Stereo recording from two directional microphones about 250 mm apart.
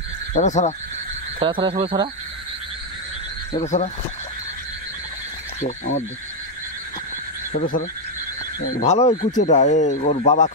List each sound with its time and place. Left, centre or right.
0.3 s speech: left
1.4 s speech: right
3.5 s speech: left
5.6 s speech: left
7.5 s speech: left